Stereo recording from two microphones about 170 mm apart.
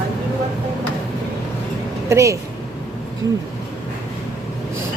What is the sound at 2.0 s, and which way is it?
Speech, 20° right (ahead or behind).